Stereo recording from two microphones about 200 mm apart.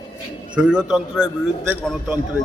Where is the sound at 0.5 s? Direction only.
5° right (ahead or behind).